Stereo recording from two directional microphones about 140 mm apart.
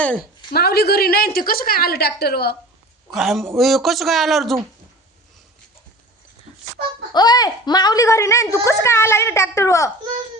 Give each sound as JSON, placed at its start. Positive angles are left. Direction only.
{"t": 0.5, "sound": "a woman's voice", "side_deg": 90}
{"t": 3.1, "sound": "speech", "side_deg": 0}
{"t": 7.1, "sound": "a woman's voice", "side_deg": 30}